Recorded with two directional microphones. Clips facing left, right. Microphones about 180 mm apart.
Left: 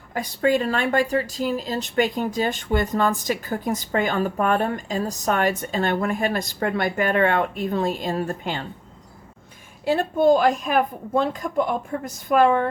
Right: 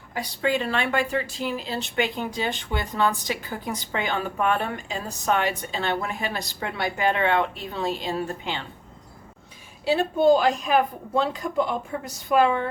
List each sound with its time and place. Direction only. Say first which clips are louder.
0.1 s speech: left 4 dB; 45° left (ahead or behind)
9.8 s speech: left 1 dB; 50° left (ahead or behind)